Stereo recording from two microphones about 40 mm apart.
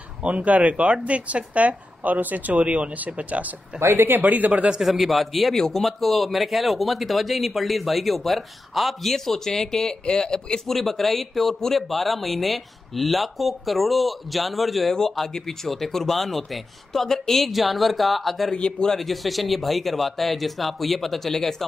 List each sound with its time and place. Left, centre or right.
0.2 s a woman's voice: right
3.8 s speech: right
4.2 s a woman's voice: right
4.8 s a man's voice: centre
10.7 s a man's voice: centre
15.0 s speech: centre
17.5 s a man's voice: centre
18.5 s a man's voice: centre
18.9 s a man's voice: centre